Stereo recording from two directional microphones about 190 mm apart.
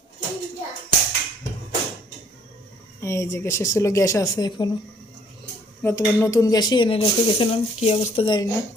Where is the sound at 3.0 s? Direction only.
15° left (ahead or behind).